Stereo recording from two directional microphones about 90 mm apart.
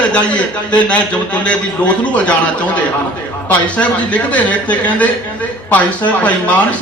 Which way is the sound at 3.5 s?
15° left (ahead or behind).